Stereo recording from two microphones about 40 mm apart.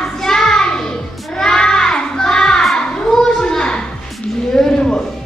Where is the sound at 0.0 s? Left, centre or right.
Centre.